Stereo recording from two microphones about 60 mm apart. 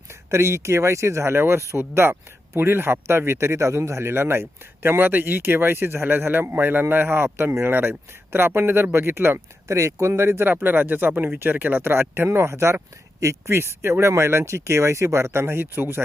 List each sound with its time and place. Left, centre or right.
0.1 s speech: right
9.6 s speech: right